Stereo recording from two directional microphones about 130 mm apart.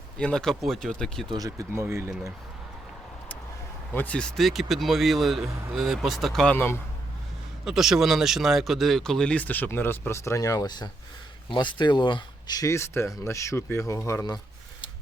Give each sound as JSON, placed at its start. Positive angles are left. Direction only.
{"t": 0.2, "sound": "speech", "side_deg": 5}
{"t": 1.3, "sound": "speech", "side_deg": -30}
{"t": 3.9, "sound": "speech", "side_deg": 10}
{"t": 7.6, "sound": "speech", "side_deg": -5}